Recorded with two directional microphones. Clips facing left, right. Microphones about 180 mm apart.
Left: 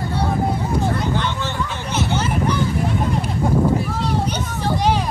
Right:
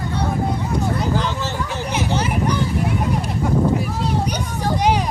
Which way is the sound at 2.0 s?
15° right (ahead or behind).